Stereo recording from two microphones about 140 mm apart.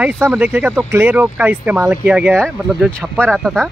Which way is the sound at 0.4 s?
10° right (ahead or behind).